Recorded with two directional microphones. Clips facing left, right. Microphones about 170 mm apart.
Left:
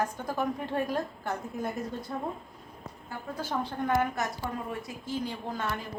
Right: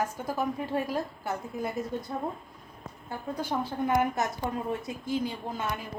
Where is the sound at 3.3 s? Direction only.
15° right (ahead or behind).